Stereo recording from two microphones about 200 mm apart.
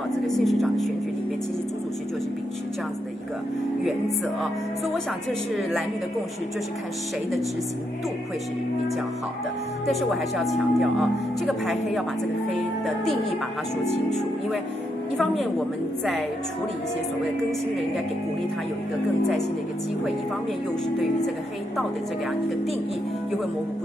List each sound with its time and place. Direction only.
0.4 s speech: centre (ahead or behind)
4.4 s speech: centre (ahead or behind)
9.8 s speech: centre (ahead or behind)